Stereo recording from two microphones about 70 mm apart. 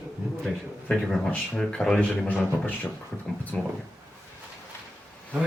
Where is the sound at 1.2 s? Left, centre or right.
Centre.